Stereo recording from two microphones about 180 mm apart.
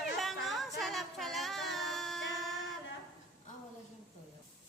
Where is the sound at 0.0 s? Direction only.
Centre (ahead or behind).